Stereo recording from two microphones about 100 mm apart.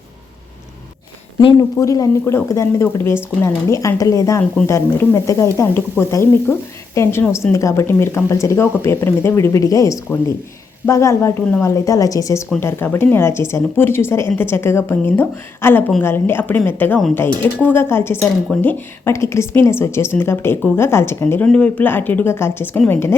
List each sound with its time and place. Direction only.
1.5 s speech: 35° left (ahead or behind); by 19.1 s 15° left (ahead or behind)
19.1 s speech: 30° left (ahead or behind)
21.4 s speech: 10° left (ahead or behind)